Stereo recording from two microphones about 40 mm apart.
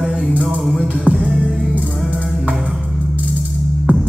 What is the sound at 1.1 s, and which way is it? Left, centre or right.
Music, left.